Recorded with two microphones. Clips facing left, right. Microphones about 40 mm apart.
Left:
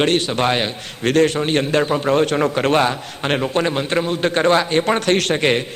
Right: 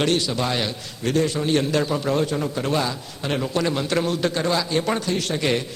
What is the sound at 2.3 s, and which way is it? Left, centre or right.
A man's voice, left.